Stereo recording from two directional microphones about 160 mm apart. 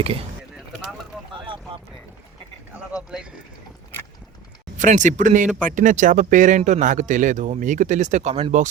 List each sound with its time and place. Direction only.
4.8 s speech: 50° right (ahead or behind)